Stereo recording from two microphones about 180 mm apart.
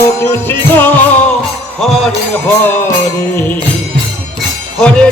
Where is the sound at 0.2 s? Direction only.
15° left (ahead or behind).